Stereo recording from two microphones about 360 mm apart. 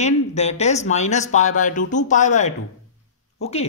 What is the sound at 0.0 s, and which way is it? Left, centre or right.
Speech, centre.